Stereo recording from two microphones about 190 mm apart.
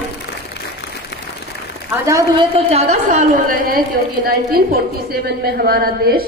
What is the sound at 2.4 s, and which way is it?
A woman's voice, 30° right (ahead or behind).